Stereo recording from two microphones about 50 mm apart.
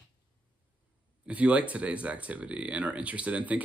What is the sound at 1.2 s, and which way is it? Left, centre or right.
Speech, right.